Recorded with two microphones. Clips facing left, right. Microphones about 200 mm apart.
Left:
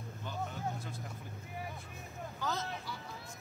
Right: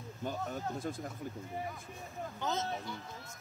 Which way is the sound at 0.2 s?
45° right (ahead or behind).